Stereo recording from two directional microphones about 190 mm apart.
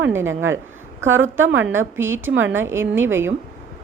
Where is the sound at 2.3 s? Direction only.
75° right (ahead or behind).